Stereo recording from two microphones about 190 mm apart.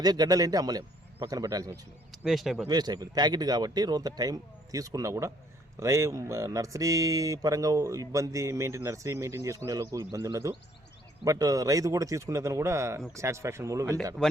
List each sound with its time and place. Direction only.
0.0 s speech: 20° right (ahead or behind)
2.2 s speech: centre (ahead or behind)
2.6 s speech: 20° right (ahead or behind)